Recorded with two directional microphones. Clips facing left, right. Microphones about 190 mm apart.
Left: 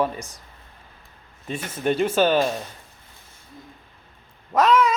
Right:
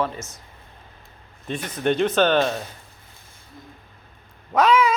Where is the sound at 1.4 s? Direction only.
5° left (ahead or behind).